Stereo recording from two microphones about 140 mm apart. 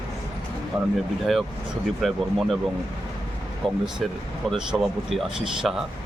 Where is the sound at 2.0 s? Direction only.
Centre (ahead or behind).